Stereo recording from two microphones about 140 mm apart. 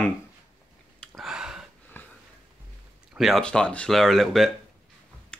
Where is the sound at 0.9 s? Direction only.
Centre (ahead or behind).